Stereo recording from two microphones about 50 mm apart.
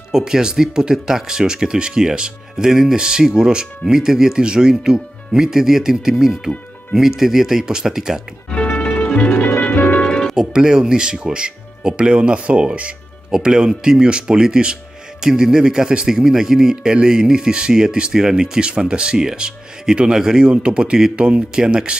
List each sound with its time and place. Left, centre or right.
0.1 s a man's voice: centre
8.5 s music: left
9.8 s music: left
10.0 s music: centre
10.4 s a man's voice: centre